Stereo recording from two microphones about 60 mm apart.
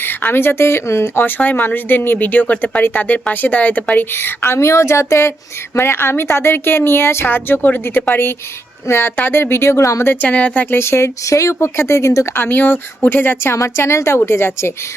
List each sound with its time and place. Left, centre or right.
0.0 s speech: left
1.4 s speech: left
4.2 s speech: left
5.7 s speech: left
10.2 s speech: left
10.8 s speech: left
12.3 s speech: left
13.5 s speech: left